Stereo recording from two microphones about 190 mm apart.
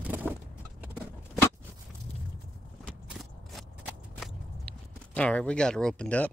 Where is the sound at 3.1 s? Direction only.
Centre (ahead or behind).